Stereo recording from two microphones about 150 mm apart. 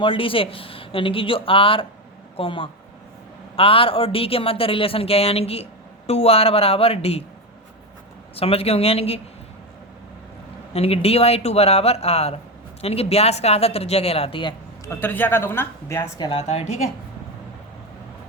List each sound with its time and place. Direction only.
0.0 s speech: 35° left (ahead or behind)
8.4 s speech: 40° left (ahead or behind)
10.8 s speech: 40° left (ahead or behind)
14.8 s a woman's voice: 15° left (ahead or behind)
16.1 s speech: 25° left (ahead or behind)
16.4 s speech: 45° left (ahead or behind)